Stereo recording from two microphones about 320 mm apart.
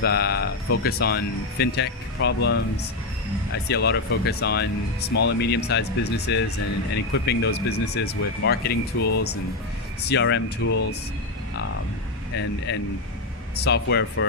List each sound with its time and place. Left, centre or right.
0.0 s speech: left
3.7 s speech: left
9.0 s speech: left
10.1 s speech: left
12.4 s speech: left